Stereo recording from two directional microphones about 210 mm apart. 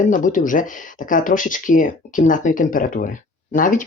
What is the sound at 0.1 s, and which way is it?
Speech, 40° left (ahead or behind).